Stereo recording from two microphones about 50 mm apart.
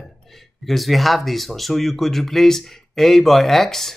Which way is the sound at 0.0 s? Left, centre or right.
Centre.